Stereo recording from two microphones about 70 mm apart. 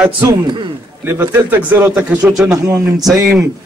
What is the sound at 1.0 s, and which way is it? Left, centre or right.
Speech, right.